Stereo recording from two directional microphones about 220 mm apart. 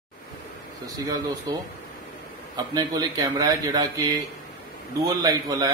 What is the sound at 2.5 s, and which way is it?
A man's voice, 20° right (ahead or behind).